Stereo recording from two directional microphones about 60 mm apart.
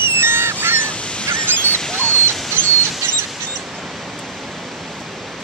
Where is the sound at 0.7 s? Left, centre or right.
Centre.